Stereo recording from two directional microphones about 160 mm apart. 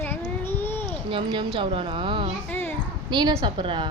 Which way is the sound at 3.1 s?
30° right (ahead or behind).